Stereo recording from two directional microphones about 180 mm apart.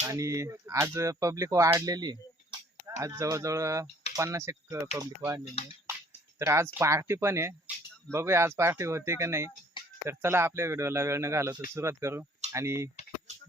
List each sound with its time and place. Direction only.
0.0 s speech: 20° right (ahead or behind)
6.4 s speech: 15° right (ahead or behind)
9.7 s a sound: 25° left (ahead or behind)
10.1 s speech: 15° right (ahead or behind)